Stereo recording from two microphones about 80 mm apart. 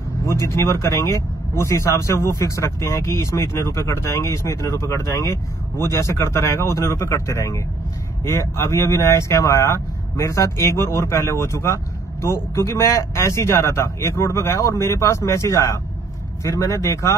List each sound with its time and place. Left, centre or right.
0.3 s speech: left